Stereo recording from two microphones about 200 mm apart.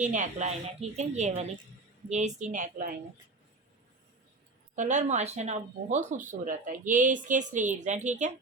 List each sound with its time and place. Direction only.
0.0 s speech: 35° right (ahead or behind)
4.7 s speech: 40° right (ahead or behind)